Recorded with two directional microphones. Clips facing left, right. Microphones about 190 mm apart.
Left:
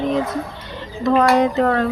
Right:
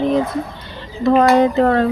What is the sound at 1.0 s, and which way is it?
Speech, 30° right (ahead or behind).